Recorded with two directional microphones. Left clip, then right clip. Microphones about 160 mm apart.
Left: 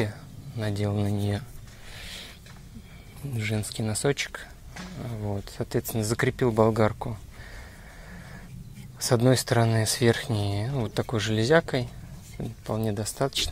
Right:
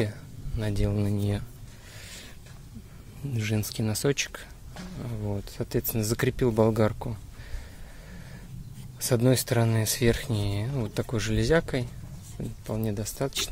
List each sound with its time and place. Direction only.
0.0 s speech: 15° right (ahead or behind)
2.0 s a sound: 10° right (ahead or behind)
3.3 s speech: 25° right (ahead or behind)
9.0 s speech: centre (ahead or behind)